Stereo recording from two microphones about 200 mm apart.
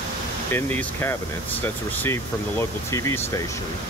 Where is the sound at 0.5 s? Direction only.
10° left (ahead or behind).